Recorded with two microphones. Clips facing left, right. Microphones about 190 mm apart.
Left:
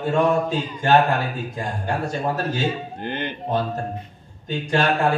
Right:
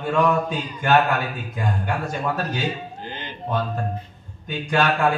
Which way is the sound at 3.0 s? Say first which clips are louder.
Left 7 dB; 60° left (ahead or behind).